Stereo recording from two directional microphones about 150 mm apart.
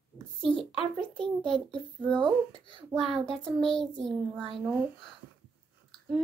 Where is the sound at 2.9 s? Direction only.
Centre (ahead or behind).